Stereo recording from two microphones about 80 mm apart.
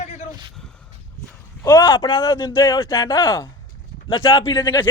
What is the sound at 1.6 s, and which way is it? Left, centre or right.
A man's voice, left.